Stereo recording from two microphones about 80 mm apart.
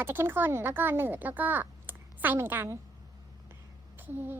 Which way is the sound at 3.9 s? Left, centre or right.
Right.